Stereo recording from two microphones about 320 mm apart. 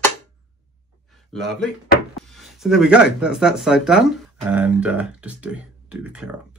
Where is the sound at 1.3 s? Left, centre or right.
Centre.